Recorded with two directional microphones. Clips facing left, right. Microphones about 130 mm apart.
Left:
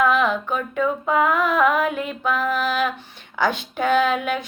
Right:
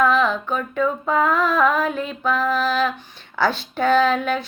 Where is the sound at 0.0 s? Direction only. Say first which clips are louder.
Right 1 dB; 20° left (ahead or behind).